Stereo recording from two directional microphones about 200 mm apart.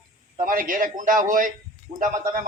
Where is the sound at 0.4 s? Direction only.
45° right (ahead or behind).